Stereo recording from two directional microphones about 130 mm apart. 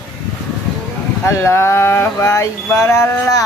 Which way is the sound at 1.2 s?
20° left (ahead or behind).